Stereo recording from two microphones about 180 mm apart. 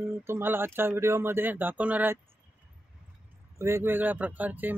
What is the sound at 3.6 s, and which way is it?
Speech, 15° right (ahead or behind).